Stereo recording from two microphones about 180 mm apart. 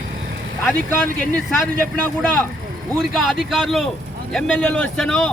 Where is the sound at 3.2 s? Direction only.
Centre (ahead or behind).